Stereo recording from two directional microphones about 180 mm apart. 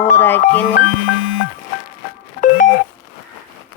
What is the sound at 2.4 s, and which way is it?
Beep, 50° left (ahead or behind).